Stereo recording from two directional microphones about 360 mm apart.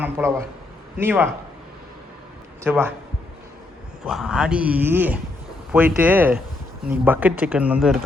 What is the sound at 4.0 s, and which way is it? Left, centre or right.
Speech, centre.